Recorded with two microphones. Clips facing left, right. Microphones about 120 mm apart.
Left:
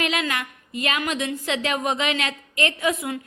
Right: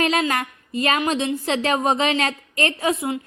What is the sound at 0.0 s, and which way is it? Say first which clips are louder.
A woman's voice: right 5 dB; 40° right (ahead or behind).